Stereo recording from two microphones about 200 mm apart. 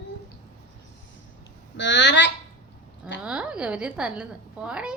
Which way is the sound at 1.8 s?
60° left (ahead or behind).